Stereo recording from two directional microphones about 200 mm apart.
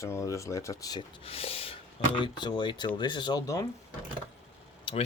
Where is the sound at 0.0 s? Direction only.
15° left (ahead or behind).